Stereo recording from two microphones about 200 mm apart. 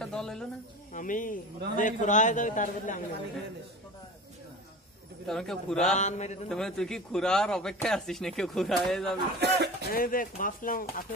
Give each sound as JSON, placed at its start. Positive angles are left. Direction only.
{"t": 0.0, "sound": "a sound", "side_deg": 5}
{"t": 0.9, "sound": "a man's voice", "side_deg": 40}
{"t": 5.2, "sound": "speech", "side_deg": 0}
{"t": 5.9, "sound": "a man's voice", "side_deg": 35}
{"t": 6.5, "sound": "speech", "side_deg": 0}
{"t": 9.4, "sound": "speech", "side_deg": -60}
{"t": 9.9, "sound": "speech", "side_deg": 45}